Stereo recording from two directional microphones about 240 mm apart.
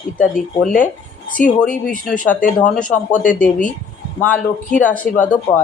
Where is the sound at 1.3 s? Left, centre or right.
Left.